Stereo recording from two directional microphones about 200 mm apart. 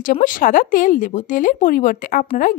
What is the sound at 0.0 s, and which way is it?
A woman's voice, 40° left (ahead or behind).